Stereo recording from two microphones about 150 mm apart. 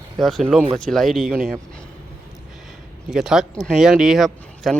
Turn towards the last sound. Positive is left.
turn(degrees=0)  # may be behind; listen again after turning